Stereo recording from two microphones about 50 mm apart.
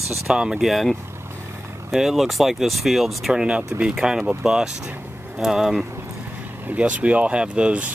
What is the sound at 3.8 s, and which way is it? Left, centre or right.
Speech, centre.